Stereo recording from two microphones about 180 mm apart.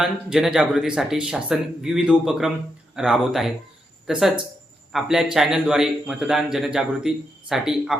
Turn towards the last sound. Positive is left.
turn(degrees=0)  # may be behind; listen again after turning